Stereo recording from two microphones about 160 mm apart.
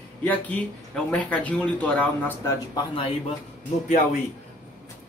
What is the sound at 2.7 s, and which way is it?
Speech, 35° left (ahead or behind).